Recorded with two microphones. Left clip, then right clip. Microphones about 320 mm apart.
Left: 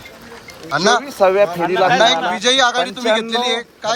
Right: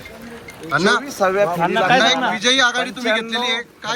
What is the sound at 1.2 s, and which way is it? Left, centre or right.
Speech, left.